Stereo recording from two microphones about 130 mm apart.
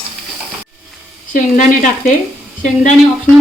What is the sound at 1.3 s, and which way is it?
Speech, 90° left.